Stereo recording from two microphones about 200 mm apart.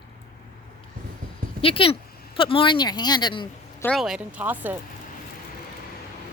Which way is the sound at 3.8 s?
Centre (ahead or behind).